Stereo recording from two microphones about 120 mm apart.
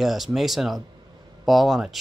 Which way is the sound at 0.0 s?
Centre (ahead or behind).